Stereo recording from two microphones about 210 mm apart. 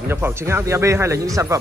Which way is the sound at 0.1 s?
10° right (ahead or behind).